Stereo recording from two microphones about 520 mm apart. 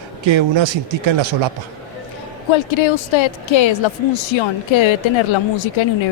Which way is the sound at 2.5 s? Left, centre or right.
Left.